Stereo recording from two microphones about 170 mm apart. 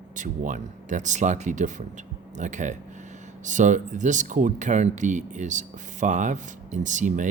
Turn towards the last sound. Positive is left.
turn(degrees=-45)  # may be behind; listen again after turning